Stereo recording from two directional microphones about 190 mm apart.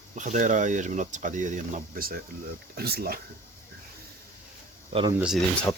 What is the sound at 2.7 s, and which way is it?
Speech, 55° right (ahead or behind).